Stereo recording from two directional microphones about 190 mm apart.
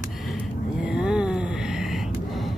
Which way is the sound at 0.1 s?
Centre (ahead or behind).